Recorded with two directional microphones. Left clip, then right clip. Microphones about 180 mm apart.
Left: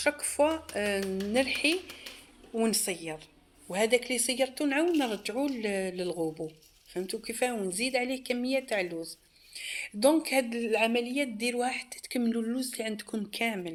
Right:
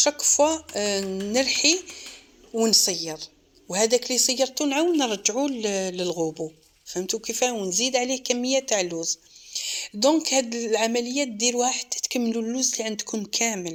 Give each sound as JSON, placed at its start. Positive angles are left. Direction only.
{"t": 0.0, "sound": "a woman's voice", "side_deg": -35}